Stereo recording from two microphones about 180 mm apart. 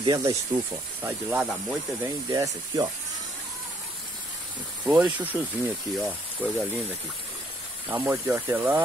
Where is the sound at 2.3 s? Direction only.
20° right (ahead or behind).